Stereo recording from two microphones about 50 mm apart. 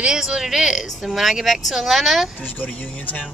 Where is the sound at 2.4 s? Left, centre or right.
Left.